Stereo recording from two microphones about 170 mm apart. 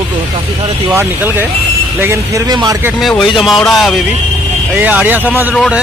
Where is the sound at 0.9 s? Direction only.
10° right (ahead or behind).